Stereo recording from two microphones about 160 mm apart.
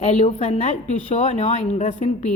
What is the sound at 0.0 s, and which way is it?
A woman's voice, 45° left (ahead or behind).